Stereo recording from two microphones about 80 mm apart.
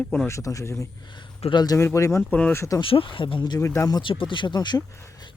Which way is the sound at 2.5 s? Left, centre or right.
Left.